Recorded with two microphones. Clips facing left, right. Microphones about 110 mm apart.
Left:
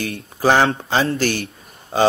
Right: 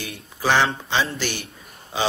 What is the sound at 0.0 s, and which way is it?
Speech, 45° left (ahead or behind).